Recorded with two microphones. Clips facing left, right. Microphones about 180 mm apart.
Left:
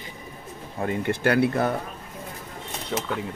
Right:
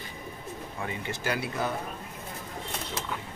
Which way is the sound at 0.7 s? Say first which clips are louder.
Left 11 dB; 50° left (ahead or behind).